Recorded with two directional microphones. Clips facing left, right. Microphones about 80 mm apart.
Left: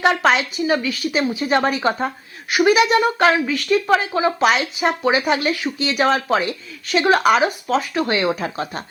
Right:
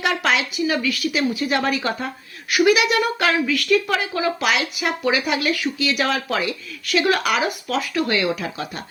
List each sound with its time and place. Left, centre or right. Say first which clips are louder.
0.0 s a woman's voice: left 4 dB; left